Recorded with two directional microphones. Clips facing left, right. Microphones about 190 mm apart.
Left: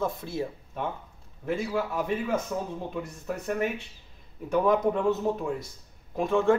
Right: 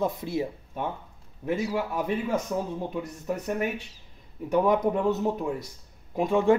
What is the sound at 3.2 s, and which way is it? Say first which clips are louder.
Speech: right 1 dB; 15° right (ahead or behind).